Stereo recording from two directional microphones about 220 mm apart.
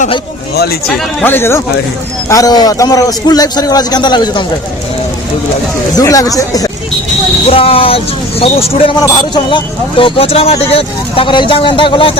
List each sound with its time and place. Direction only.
0.5 s speech: 45° left (ahead or behind)
0.9 s a man's voice: 10° left (ahead or behind)
6.0 s a man's voice: 15° left (ahead or behind)